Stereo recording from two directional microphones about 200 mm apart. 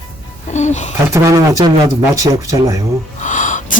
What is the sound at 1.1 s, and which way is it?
A man's voice, 15° right (ahead or behind).